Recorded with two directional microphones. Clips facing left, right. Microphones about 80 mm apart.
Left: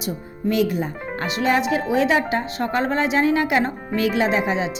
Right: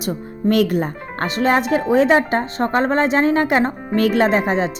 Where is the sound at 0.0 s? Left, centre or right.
Right.